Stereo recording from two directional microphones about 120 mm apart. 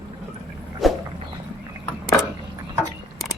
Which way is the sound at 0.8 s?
Centre (ahead or behind).